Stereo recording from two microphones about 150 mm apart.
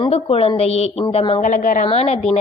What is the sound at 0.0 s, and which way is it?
A woman's voice, 40° left (ahead or behind).